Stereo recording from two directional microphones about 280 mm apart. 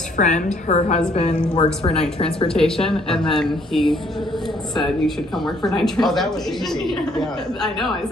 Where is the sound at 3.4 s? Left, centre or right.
Centre.